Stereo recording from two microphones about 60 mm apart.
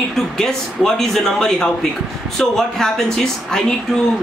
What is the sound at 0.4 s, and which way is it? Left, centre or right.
Speech, centre.